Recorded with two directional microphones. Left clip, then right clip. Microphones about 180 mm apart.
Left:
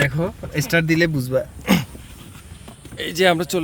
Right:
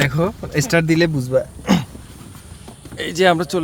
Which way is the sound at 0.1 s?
5° right (ahead or behind).